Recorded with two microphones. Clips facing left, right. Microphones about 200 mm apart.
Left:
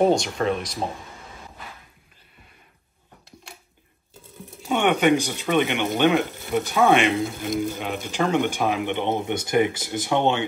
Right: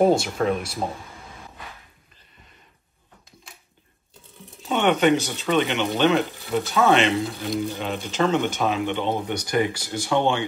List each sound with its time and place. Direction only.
0.0 s speech: 5° right (ahead or behind)
4.6 s speech: 15° left (ahead or behind)
7.1 s speech: centre (ahead or behind)
7.8 s speech: 15° left (ahead or behind)